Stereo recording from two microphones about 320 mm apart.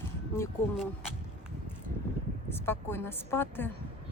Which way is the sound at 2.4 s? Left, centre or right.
Centre.